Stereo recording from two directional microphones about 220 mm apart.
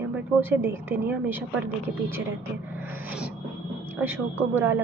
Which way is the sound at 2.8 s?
10° right (ahead or behind).